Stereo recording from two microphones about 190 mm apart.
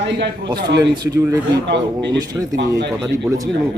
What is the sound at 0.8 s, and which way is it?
A man's voice, 20° right (ahead or behind).